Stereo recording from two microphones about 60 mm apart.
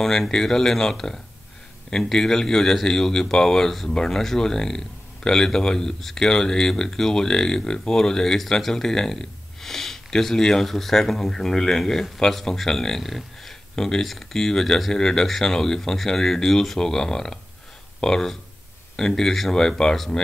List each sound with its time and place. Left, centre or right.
0.0 s speech: centre